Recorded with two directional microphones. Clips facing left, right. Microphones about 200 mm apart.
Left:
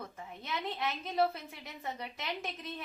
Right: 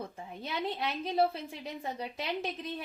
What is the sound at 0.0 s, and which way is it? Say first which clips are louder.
A woman's voice: right 4 dB; 30° right (ahead or behind).